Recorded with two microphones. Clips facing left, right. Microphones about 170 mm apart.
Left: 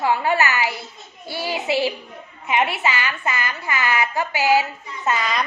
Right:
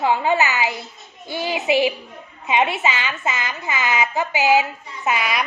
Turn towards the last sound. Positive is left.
turn(degrees=-10)  # may be behind; listen again after turning